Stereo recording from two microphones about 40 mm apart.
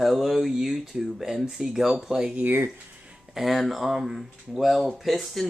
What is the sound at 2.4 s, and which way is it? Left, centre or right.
Speech, right.